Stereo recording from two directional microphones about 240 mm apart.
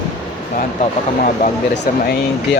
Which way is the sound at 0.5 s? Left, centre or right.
Left.